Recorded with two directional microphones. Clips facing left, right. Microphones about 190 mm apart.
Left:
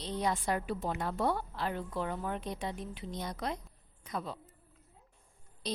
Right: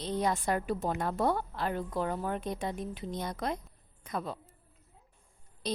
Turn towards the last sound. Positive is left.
turn(degrees=-50)  # may be behind; listen again after turning